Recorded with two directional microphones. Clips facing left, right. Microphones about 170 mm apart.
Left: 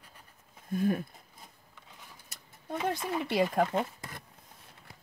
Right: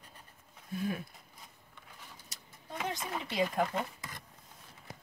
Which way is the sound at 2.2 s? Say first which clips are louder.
Left 7 dB; 60° left (ahead or behind).